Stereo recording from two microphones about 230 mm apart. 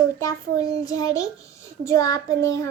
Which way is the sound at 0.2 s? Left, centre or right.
Centre.